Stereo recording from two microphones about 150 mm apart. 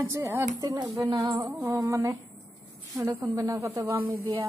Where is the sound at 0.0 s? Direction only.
15° right (ahead or behind).